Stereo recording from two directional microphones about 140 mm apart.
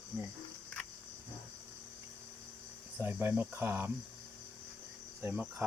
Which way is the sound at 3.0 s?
15° right (ahead or behind).